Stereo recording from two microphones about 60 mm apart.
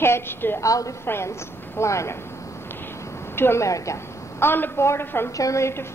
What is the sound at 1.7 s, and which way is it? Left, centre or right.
Speech, left.